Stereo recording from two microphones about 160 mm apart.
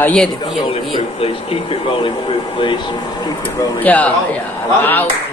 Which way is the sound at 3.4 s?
10° left (ahead or behind).